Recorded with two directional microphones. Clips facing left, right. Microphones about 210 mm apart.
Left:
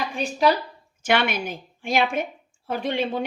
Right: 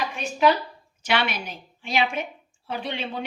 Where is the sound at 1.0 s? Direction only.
50° left (ahead or behind).